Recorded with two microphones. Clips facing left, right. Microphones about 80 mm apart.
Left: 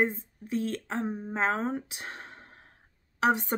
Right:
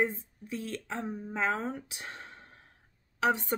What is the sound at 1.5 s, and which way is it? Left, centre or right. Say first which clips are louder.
Speech: left 3 dB; left.